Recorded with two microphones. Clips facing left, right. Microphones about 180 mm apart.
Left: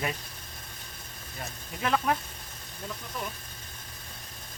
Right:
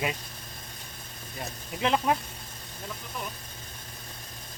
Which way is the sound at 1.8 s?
20° right (ahead or behind).